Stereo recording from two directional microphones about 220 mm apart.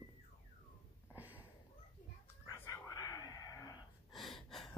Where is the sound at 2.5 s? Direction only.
15° left (ahead or behind).